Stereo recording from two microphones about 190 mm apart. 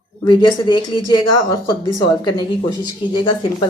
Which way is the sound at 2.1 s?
20° left (ahead or behind).